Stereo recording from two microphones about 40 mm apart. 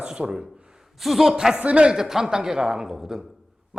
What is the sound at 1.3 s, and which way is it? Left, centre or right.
Speech, centre.